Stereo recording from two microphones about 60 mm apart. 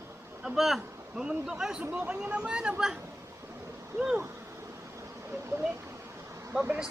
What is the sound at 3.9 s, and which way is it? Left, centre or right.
Speech, right.